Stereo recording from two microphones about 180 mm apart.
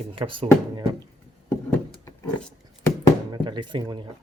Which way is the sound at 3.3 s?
25° right (ahead or behind).